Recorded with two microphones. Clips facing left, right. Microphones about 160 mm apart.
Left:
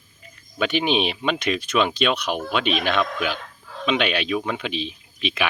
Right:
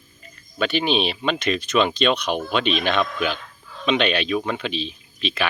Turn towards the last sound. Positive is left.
turn(degrees=15)  # may be behind; listen again after turning